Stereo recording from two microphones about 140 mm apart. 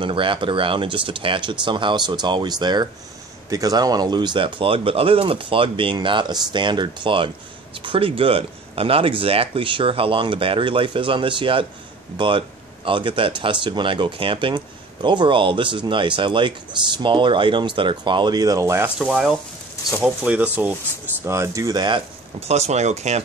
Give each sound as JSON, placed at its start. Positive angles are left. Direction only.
{"t": 0.0, "sound": "speech", "side_deg": -35}
{"t": 18.9, "sound": "speech", "side_deg": -5}
{"t": 22.4, "sound": "speech", "side_deg": -50}